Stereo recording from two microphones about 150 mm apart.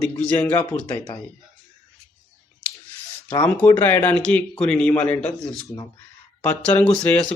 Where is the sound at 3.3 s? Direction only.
10° left (ahead or behind).